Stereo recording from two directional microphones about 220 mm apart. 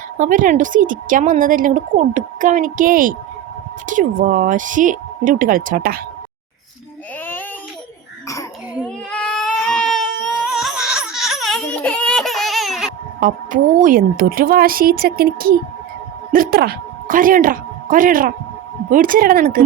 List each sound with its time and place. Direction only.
0.2 s speech: 35° right (ahead or behind)
8.8 s baby cry: 5° left (ahead or behind)
13.1 s speech: 40° right (ahead or behind)